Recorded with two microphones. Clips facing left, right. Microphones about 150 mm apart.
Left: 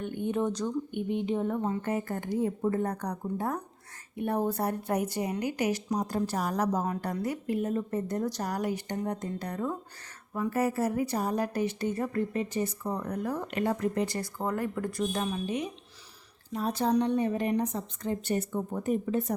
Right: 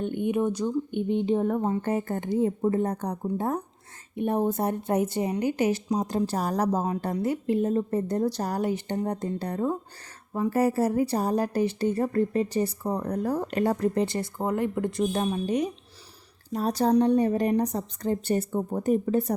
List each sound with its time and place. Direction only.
0.0 s speech: 20° right (ahead or behind)
0.9 s a woman's voice: 25° right (ahead or behind)
1.5 s speech: 50° right (ahead or behind)
1.7 s a woman's voice: 30° right (ahead or behind)